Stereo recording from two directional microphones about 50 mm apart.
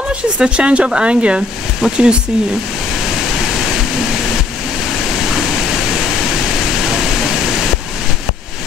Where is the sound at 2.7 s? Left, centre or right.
Centre.